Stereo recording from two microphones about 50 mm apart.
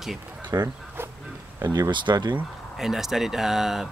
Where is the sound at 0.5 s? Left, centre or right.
Right.